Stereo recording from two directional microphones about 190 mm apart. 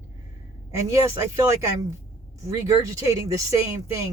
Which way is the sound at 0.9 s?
15° right (ahead or behind).